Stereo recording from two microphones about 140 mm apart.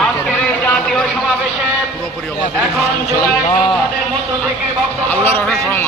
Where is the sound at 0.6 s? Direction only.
5° left (ahead or behind).